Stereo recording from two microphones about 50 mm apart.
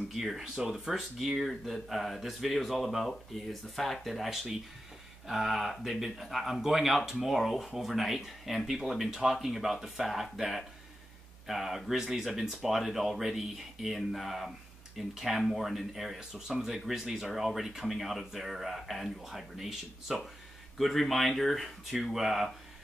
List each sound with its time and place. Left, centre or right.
0.1 s speech: centre
16.2 s speech: centre
16.6 s speech: centre